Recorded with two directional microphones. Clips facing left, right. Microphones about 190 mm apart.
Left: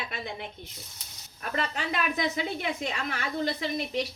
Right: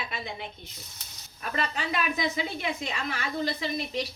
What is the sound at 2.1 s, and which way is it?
A woman's voice, 55° left (ahead or behind).